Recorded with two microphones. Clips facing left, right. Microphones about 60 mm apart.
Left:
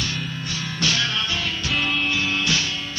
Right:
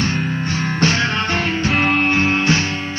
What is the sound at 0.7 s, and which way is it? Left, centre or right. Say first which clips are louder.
Music: right 6 dB; right.